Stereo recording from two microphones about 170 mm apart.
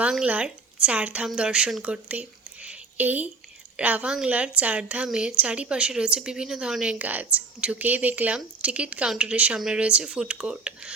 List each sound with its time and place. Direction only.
0.0 s a woman's voice: 5° right (ahead or behind)